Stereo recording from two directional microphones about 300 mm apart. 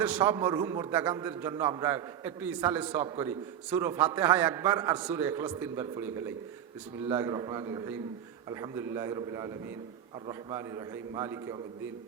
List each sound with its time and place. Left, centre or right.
0.0 s a man's voice: centre